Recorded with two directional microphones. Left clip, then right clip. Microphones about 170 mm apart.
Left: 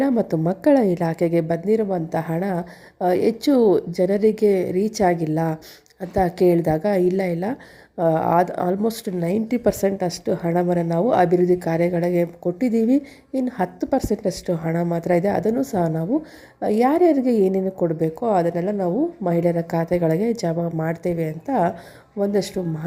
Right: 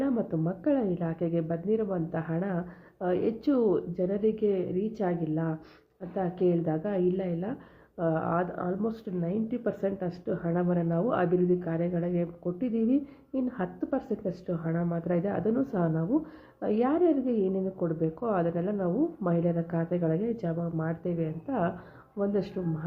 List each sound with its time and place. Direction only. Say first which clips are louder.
0.0 s a woman's voice: left 9 dB; 40° left (ahead or behind)